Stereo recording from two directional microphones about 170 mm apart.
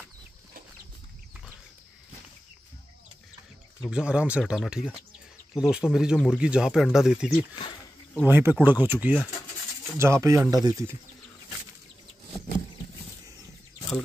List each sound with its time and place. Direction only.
3.9 s speech: 5° right (ahead or behind)